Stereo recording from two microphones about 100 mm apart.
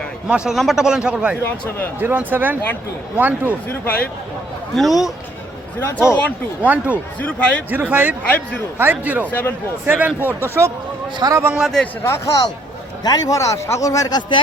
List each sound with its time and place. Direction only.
0.3 s a man's voice: 10° right (ahead or behind)
1.5 s speech: 15° left (ahead or behind)
2.0 s a man's voice: 20° right (ahead or behind)
4.7 s speech: centre (ahead or behind)
5.8 s speech: 25° left (ahead or behind)
6.7 s a man's voice: 15° right (ahead or behind)
7.2 s speech: 15° left (ahead or behind)
7.7 s a man's voice: 20° right (ahead or behind)
11.2 s a man's voice: 35° right (ahead or behind)
12.0 s a man's voice: 30° left (ahead or behind); by 14.4 s 50° left (ahead or behind)